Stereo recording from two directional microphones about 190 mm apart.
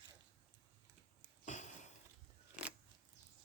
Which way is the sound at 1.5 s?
40° left (ahead or behind).